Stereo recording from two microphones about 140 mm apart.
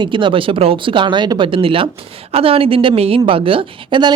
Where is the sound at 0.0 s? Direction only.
35° right (ahead or behind).